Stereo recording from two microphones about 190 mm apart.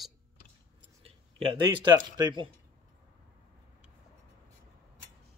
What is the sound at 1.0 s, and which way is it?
Speech, 25° right (ahead or behind).